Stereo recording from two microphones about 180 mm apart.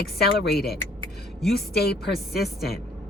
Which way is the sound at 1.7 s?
60° left (ahead or behind).